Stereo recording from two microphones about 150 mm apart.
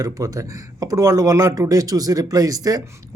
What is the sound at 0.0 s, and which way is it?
Speech, 20° right (ahead or behind).